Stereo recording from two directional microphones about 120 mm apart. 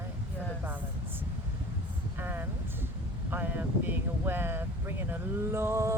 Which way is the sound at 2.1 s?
15° right (ahead or behind).